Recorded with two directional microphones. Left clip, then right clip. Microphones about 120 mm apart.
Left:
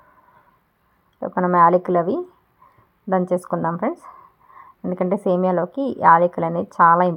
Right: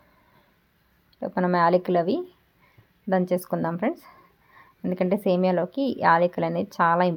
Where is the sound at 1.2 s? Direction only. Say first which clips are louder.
Left 7 dB; centre (ahead or behind).